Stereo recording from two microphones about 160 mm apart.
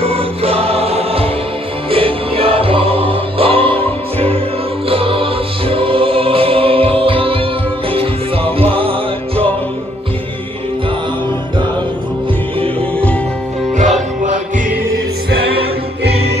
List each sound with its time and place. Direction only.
0.0 s music: 35° right (ahead or behind)
4.8 s music: 35° right (ahead or behind)
8.5 s music: 35° right (ahead or behind)